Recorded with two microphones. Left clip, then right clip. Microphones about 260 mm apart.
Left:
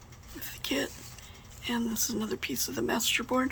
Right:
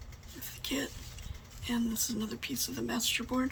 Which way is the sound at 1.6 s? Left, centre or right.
Centre.